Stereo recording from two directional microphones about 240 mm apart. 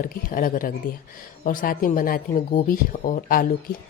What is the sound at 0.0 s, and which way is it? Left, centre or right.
A woman's voice, left.